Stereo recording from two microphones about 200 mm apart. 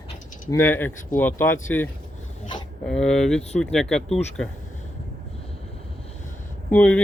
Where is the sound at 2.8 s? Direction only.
5° left (ahead or behind).